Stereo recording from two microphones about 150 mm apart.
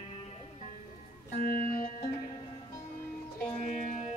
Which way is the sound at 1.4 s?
70° left (ahead or behind).